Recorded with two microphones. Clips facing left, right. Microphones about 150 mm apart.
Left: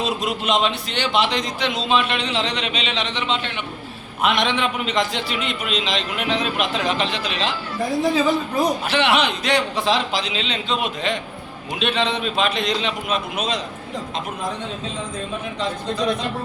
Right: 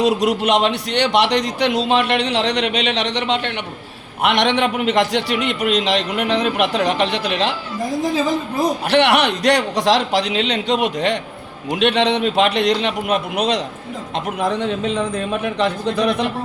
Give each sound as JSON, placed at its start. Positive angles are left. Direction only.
{"t": 0.0, "sound": "a man's voice", "side_deg": -75}
{"t": 8.9, "sound": "a man's voice", "side_deg": -65}